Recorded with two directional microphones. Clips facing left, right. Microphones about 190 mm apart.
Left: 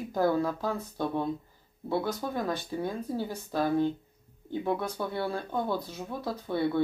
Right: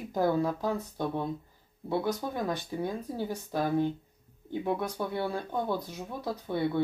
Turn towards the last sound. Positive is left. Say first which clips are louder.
# left 1 dB
turn(degrees=-15)  # may be behind; listen again after turning